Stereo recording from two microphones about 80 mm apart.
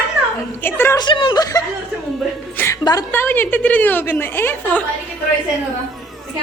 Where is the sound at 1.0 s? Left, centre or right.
Left.